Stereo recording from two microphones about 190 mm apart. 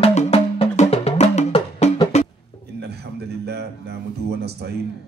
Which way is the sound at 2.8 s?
60° right (ahead or behind).